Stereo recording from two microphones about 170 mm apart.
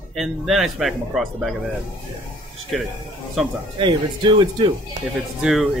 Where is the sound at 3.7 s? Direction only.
30° right (ahead or behind).